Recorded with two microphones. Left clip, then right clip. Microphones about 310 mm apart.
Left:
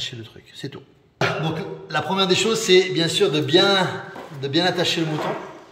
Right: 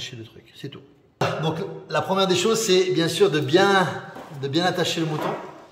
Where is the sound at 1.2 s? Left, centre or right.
Centre.